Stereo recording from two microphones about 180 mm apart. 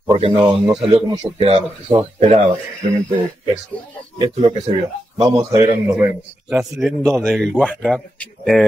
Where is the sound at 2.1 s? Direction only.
40° right (ahead or behind).